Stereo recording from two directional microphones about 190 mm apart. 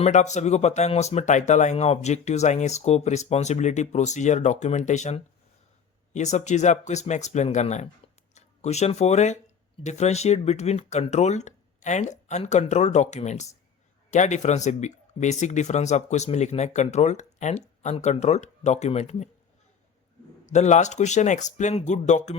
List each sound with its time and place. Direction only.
0.0 s speech: 40° left (ahead or behind)
20.5 s speech: 35° left (ahead or behind)